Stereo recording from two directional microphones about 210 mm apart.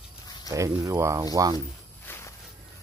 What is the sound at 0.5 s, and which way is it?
Speech, 15° right (ahead or behind).